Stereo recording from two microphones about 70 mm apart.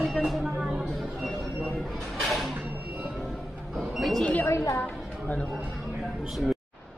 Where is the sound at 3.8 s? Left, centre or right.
Centre.